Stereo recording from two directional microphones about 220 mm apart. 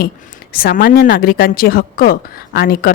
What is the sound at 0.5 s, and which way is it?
A woman's voice, 40° left (ahead or behind).